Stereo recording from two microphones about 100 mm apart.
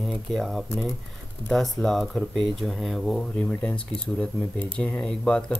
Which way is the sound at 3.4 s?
10° left (ahead or behind).